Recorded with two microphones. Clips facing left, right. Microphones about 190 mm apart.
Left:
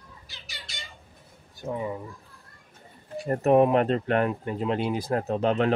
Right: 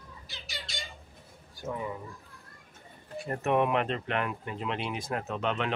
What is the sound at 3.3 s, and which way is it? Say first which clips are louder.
Speech: left 7 dB; 35° left (ahead or behind).